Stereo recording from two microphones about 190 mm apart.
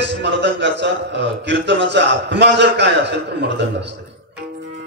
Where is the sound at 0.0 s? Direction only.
65° right (ahead or behind).